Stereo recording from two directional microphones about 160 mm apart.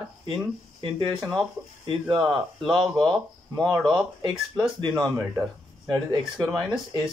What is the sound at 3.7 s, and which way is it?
Speech, 20° right (ahead or behind).